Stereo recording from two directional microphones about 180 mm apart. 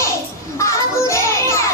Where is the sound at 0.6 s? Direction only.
15° left (ahead or behind).